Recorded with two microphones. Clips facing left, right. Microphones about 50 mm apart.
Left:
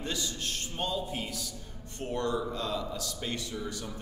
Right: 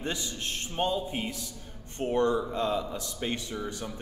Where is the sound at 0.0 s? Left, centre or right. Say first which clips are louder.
Right 1 dB; right.